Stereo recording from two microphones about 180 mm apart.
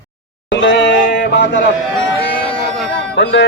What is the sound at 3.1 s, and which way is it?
Speech, 75° left (ahead or behind).